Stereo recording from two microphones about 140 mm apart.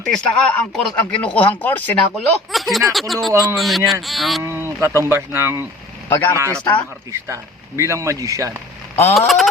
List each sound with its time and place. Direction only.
0.0 s speech: 5° left (ahead or behind)
2.5 s speech: centre (ahead or behind)
4.4 s speech: 20° right (ahead or behind)
6.1 s speech: 15° left (ahead or behind)
6.3 s a man's voice: 20° right (ahead or behind)
7.8 s a man's voice: 20° right (ahead or behind)
9.1 s speech: centre (ahead or behind)